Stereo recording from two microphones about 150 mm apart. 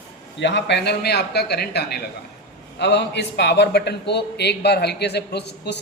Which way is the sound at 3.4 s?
90° left.